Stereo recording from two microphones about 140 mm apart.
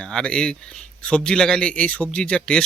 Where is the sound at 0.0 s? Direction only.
5° left (ahead or behind).